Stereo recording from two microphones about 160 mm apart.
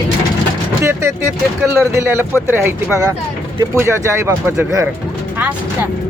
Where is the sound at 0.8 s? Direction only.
15° right (ahead or behind).